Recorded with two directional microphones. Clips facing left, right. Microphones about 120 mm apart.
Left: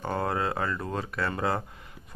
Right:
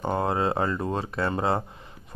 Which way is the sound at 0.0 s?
20° right (ahead or behind).